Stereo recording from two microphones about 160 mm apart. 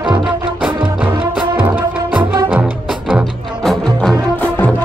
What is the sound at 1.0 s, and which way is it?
Music, 30° right (ahead or behind).